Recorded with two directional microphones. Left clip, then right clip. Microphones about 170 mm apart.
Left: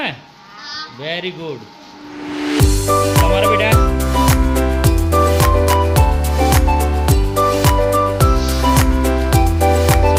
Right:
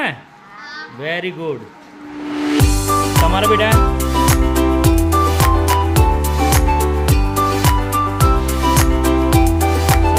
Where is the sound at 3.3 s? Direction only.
20° right (ahead or behind).